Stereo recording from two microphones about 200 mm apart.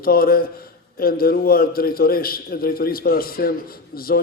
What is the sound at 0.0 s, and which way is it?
A man's voice, 50° left (ahead or behind).